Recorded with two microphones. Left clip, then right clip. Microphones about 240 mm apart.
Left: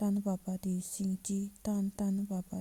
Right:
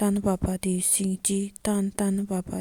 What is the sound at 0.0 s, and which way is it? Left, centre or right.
Speech, right.